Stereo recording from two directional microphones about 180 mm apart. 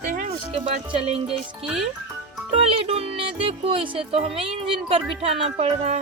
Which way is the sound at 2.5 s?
35° right (ahead or behind).